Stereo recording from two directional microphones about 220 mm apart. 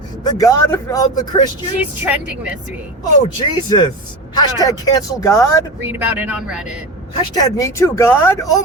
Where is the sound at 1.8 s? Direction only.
5° right (ahead or behind).